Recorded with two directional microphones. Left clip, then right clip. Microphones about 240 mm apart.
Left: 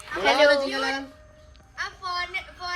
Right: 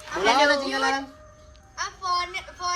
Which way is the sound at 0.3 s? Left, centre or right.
Right.